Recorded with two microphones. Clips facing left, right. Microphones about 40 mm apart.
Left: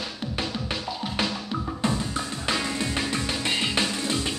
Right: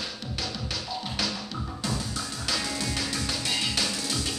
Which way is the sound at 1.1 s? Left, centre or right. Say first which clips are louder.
Left 5 dB; left.